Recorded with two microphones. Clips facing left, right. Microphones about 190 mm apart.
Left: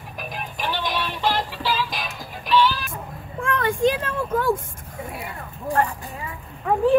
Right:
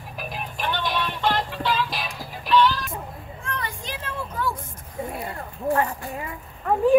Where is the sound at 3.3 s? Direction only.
55° left (ahead or behind).